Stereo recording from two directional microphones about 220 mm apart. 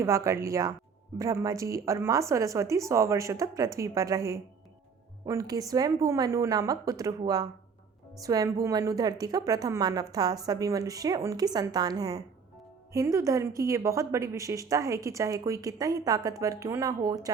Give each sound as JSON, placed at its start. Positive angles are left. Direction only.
{"t": 0.0, "sound": "a woman's voice", "side_deg": -15}